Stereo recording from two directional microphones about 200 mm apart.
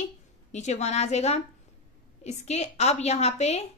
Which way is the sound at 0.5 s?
35° left (ahead or behind).